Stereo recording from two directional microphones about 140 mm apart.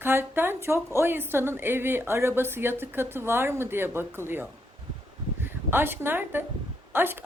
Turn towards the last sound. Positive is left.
turn(degrees=-15)  # may be behind; listen again after turning